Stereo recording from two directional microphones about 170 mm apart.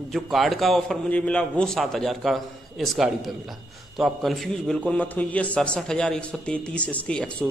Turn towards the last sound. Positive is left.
turn(degrees=5)  # may be behind; listen again after turning